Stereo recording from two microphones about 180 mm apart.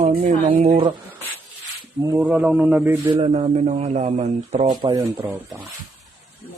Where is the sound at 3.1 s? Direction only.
30° right (ahead or behind).